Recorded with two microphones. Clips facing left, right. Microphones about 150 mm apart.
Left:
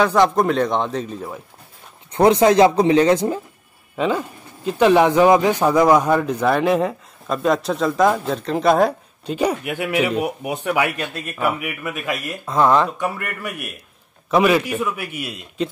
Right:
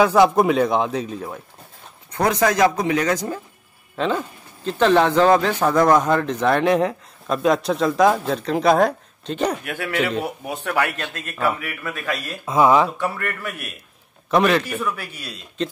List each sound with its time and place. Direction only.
0.0 s speech: 5° right (ahead or behind)
2.1 s speech: 25° left (ahead or behind)
3.9 s speech: 5° left (ahead or behind)
12.4 s speech: 5° right (ahead or behind)
12.9 s speech: 15° left (ahead or behind)